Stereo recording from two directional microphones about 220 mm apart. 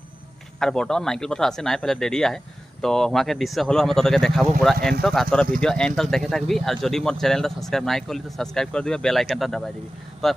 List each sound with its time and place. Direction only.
0.6 s speech: 5° left (ahead or behind)